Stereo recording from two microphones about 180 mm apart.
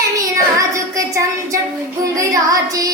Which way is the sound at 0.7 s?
15° right (ahead or behind).